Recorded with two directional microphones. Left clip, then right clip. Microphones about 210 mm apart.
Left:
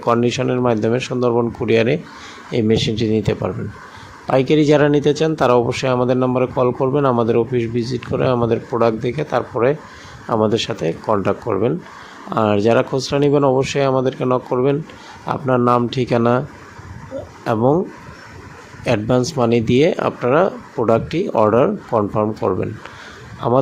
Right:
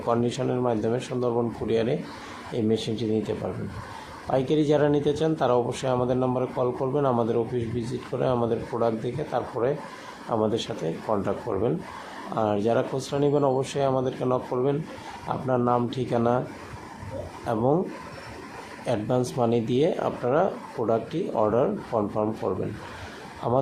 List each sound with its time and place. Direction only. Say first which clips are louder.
0.0 s speech: left 8 dB; 35° left (ahead or behind)
17.4 s speech: left 8 dB; 35° left (ahead or behind)
18.9 s speech: left 8 dB; 35° left (ahead or behind)